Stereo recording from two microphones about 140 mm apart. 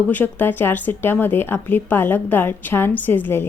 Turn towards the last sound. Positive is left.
turn(degrees=15)  # may be behind; listen again after turning